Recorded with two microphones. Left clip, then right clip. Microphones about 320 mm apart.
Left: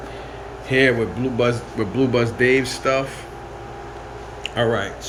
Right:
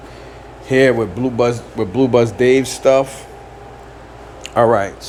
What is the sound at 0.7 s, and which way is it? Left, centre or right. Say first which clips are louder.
Speech: right 4 dB; centre.